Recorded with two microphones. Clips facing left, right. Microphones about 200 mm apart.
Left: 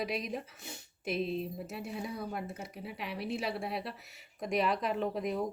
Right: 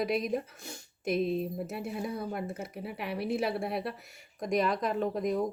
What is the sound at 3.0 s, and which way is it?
Speech, 55° right (ahead or behind).